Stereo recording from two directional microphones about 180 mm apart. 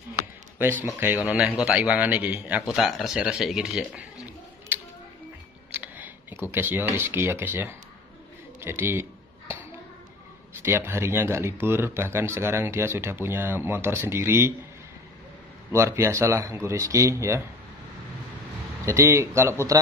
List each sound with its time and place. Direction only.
0.9 s a man's voice: 10° right (ahead or behind)
5.7 s a sound: 10° right (ahead or behind)
6.5 s speech: 10° right (ahead or behind)
10.6 s speech: 10° right (ahead or behind)
15.7 s speech: 15° right (ahead or behind)
18.9 s speech: 15° right (ahead or behind)